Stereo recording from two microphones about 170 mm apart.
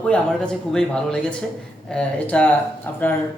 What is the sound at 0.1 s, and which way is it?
A man's voice, 5° left (ahead or behind).